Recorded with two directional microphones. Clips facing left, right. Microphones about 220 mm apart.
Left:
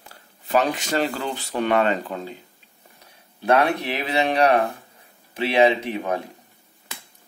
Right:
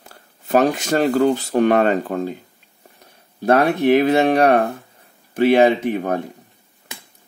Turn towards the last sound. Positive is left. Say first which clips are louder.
# right 5 dB
turn(degrees=-50)  # may be behind; listen again after turning